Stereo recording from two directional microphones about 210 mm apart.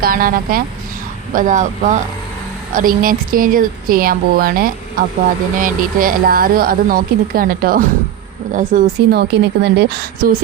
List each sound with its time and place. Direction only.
0.0 s speech: 45° right (ahead or behind)